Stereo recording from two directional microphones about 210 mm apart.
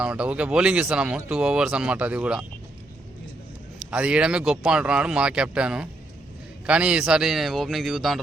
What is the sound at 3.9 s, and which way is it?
Speech, 5° right (ahead or behind).